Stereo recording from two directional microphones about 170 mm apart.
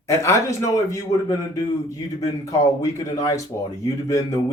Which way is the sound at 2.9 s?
20° left (ahead or behind).